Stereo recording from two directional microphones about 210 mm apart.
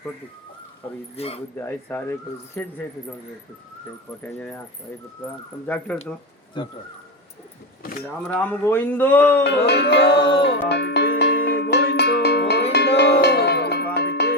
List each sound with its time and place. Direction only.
1.1 s speech: 30° left (ahead or behind)
1.5 s a man's voice: 10° left (ahead or behind)
4.2 s a man's voice: 10° left (ahead or behind)
5.6 s a man's voice: 5° left (ahead or behind)
6.6 s speech: 25° left (ahead or behind)
7.8 s a sound: 45° left (ahead or behind)
8.3 s a man's voice: 10° left (ahead or behind)
9.4 s music: 50° left (ahead or behind)